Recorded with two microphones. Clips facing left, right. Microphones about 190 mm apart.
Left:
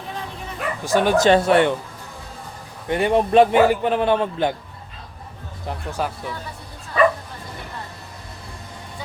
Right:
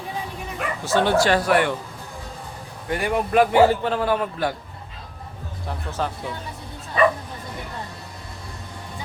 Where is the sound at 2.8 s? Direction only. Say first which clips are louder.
Left 5 dB; 25° left (ahead or behind).